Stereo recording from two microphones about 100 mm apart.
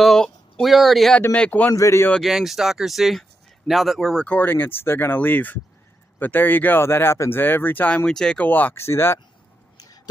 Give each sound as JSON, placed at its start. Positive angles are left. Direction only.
{"t": 0.0, "sound": "speech", "side_deg": 5}
{"t": 1.3, "sound": "a man's voice", "side_deg": 15}
{"t": 1.7, "sound": "speech", "side_deg": 30}
{"t": 2.2, "sound": "speech", "side_deg": -5}
{"t": 4.3, "sound": "speech", "side_deg": 20}
{"t": 8.5, "sound": "speech", "side_deg": 20}